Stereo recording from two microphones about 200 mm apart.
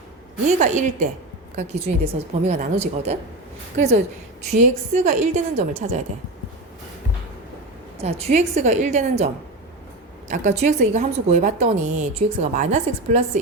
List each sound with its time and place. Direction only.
0.4 s a woman's voice: 35° right (ahead or behind)
8.0 s a woman's voice: 35° right (ahead or behind)